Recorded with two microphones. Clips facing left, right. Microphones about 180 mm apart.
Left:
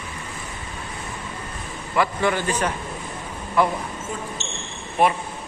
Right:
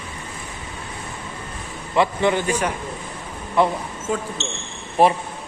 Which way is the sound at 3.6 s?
25° right (ahead or behind).